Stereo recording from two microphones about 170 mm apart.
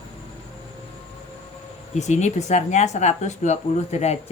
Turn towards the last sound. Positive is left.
turn(degrees=40)  # may be behind; listen again after turning